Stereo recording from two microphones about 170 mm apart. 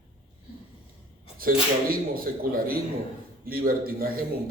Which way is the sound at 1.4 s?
60° right (ahead or behind).